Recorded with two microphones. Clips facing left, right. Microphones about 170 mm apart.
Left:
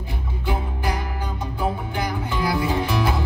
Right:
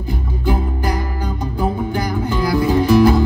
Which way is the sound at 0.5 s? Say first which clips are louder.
Right 6 dB; 40° right (ahead or behind).